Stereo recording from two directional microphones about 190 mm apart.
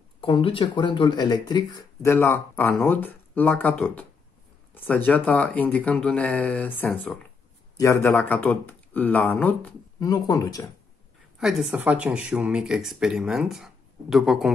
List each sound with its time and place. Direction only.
0.2 s speech: 30° left (ahead or behind)
11.3 s speech: centre (ahead or behind)